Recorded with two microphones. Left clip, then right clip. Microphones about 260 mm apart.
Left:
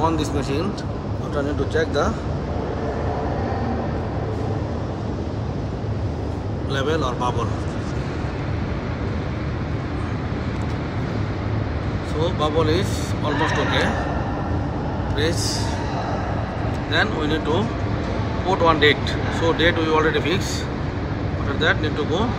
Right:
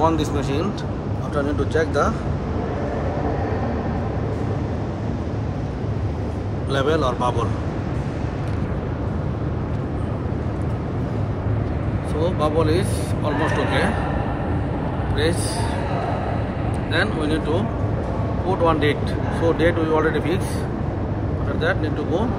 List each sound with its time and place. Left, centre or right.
0.0 s speech: centre
6.7 s speech: centre
12.2 s speech: centre
16.9 s speech: centre
21.5 s speech: centre